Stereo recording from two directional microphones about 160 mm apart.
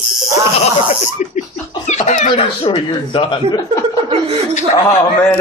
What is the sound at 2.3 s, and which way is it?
Speech, 35° left (ahead or behind).